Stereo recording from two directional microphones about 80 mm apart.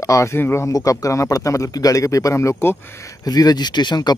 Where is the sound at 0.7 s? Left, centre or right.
Left.